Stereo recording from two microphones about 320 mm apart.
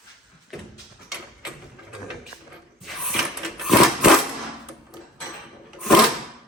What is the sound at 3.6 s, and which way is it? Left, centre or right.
Sewing machine, centre.